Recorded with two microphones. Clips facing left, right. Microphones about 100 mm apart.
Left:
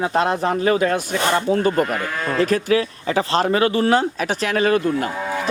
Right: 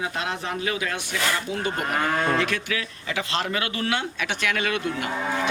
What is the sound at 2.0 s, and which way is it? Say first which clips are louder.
Speech: right 2 dB; 45° right (ahead or behind).